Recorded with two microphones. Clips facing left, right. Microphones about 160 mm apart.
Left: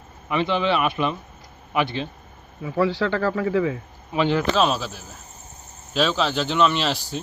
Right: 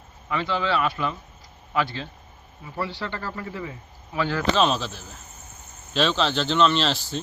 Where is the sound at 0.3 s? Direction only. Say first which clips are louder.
Left 4 dB; 20° left (ahead or behind).